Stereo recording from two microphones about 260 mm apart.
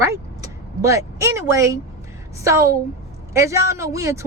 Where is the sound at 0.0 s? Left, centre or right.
Centre.